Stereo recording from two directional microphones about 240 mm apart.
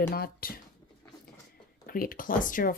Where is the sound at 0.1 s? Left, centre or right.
Left.